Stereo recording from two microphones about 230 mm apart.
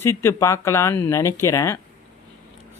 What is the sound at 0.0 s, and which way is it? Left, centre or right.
Speech, centre.